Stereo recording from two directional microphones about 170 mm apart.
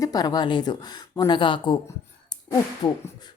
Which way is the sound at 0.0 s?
20° left (ahead or behind).